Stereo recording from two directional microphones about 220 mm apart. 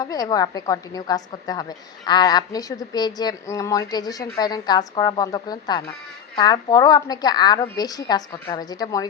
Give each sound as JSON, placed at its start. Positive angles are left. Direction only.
{"t": 0.0, "sound": "a woman's voice", "side_deg": 15}